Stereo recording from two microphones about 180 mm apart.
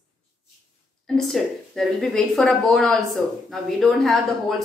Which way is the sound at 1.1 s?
Centre (ahead or behind).